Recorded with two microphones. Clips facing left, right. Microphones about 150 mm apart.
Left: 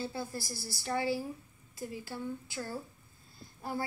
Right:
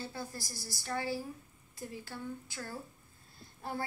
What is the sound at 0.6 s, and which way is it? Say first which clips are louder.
Speech: left 3 dB; 15° right (ahead or behind).